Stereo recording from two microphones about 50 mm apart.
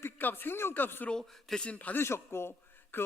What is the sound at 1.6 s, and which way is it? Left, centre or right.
Speech, left.